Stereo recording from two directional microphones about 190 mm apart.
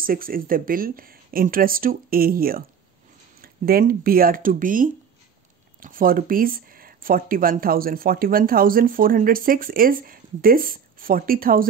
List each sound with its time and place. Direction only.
0.0 s speech: 50° right (ahead or behind)